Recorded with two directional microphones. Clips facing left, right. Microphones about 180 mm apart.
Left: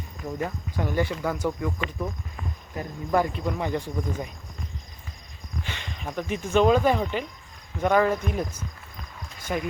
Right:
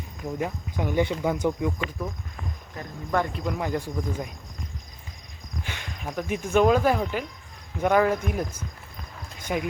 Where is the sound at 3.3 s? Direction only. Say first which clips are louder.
Even; centre (ahead or behind).